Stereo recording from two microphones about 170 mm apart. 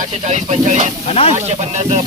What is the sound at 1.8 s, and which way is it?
Speech, 40° right (ahead or behind).